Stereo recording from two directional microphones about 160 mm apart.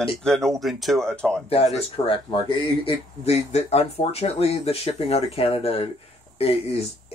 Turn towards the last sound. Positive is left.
turn(degrees=40)  # may be behind; listen again after turning